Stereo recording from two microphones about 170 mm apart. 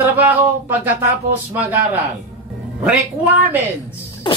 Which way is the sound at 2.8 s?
10° right (ahead or behind).